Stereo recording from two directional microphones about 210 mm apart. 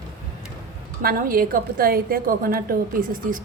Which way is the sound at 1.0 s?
40° right (ahead or behind).